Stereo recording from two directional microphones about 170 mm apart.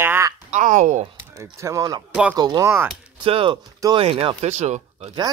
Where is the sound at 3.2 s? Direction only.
30° right (ahead or behind).